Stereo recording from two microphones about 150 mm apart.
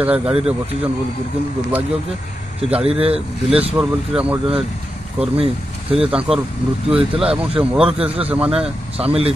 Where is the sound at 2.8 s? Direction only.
40° right (ahead or behind).